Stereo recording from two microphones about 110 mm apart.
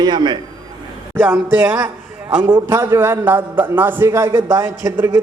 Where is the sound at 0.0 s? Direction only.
40° right (ahead or behind).